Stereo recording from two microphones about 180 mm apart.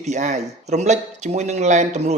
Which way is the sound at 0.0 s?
40° right (ahead or behind).